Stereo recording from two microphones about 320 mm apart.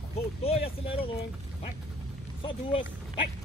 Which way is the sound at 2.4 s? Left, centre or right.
Centre.